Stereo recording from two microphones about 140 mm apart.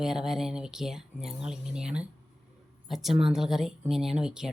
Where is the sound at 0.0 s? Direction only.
5° right (ahead or behind).